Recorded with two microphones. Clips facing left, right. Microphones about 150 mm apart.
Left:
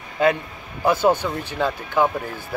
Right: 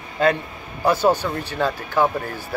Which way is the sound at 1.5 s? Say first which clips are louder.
Right 1 dB; 15° left (ahead or behind).